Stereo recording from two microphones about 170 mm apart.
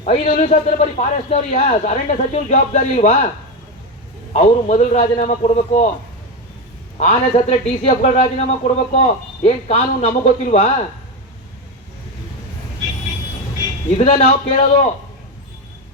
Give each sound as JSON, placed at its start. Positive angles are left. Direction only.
{"t": 0.0, "sound": "a man's voice", "side_deg": 45}
{"t": 4.4, "sound": "a man's voice", "side_deg": 45}
{"t": 7.0, "sound": "a man's voice", "side_deg": 45}
{"t": 13.9, "sound": "a man's voice", "side_deg": 40}